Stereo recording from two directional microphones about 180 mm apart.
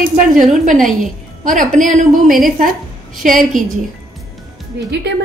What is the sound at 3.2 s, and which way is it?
Speech, 50° right (ahead or behind).